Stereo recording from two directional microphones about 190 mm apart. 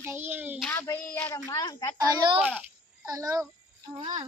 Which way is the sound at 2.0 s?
20° right (ahead or behind).